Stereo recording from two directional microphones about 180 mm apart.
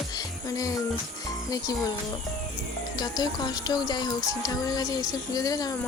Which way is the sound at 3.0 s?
20° left (ahead or behind).